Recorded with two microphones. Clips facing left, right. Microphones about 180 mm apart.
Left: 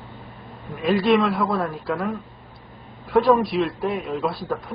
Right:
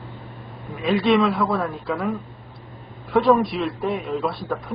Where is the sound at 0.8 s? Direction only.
Centre (ahead or behind).